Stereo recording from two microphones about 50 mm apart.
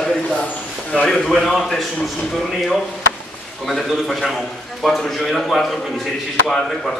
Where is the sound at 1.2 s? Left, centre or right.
Centre.